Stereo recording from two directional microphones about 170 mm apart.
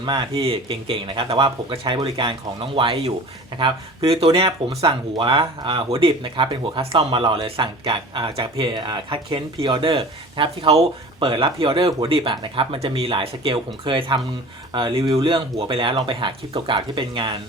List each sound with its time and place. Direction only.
0.0 s speech: 25° right (ahead or behind)